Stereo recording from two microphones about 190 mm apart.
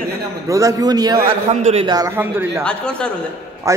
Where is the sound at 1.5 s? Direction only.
35° right (ahead or behind).